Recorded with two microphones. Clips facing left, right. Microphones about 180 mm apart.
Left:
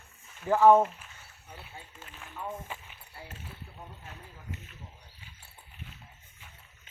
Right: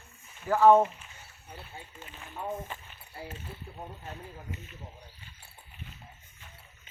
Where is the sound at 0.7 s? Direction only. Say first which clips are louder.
Even; centre (ahead or behind).